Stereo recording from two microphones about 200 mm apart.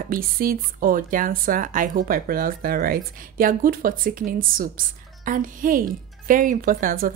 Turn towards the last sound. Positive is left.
turn(degrees=-45)  # may be behind; listen again after turning